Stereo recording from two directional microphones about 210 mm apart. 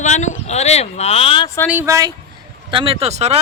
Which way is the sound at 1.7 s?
10° right (ahead or behind).